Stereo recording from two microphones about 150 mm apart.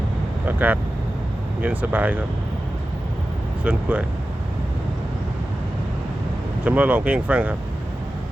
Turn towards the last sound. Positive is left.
turn(degrees=-10)  # may be behind; listen again after turning